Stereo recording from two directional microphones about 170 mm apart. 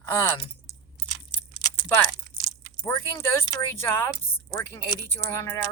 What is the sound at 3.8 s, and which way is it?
Speech, 15° left (ahead or behind).